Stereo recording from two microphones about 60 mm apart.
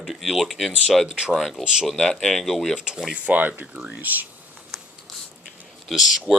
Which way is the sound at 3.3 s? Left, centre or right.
Right.